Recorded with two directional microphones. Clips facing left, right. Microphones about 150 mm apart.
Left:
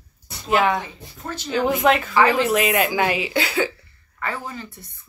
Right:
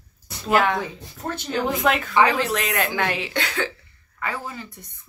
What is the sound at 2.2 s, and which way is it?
Speech, 10° left (ahead or behind).